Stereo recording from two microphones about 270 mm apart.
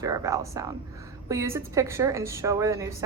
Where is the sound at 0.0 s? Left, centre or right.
Centre.